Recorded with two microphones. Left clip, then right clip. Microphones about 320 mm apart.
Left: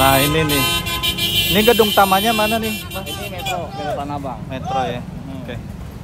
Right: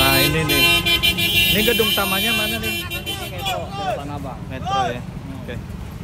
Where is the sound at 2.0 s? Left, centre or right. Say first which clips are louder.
Left 6 dB; centre.